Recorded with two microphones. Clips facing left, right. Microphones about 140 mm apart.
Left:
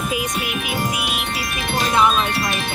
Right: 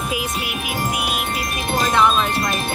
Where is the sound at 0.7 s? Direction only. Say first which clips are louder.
Right 3 dB; 45° right (ahead or behind).